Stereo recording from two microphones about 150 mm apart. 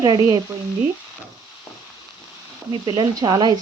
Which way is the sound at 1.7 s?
20° left (ahead or behind).